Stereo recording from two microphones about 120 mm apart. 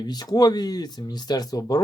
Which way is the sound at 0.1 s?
35° left (ahead or behind).